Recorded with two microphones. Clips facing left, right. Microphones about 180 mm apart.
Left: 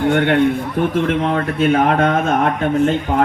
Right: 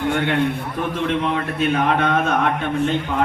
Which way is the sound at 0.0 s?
50° left (ahead or behind).